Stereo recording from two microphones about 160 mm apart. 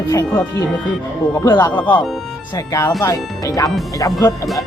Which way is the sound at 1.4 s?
25° left (ahead or behind).